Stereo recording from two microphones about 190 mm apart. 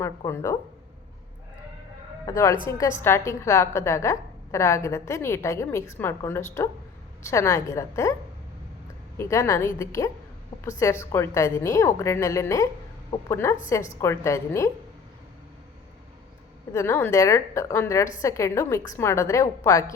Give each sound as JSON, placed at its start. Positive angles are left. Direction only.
{"t": 0.0, "sound": "a woman's voice", "side_deg": 15}
{"t": 2.2, "sound": "a woman's voice", "side_deg": 15}
{"t": 9.1, "sound": "a woman's voice", "side_deg": 15}
{"t": 16.7, "sound": "a woman's voice", "side_deg": 15}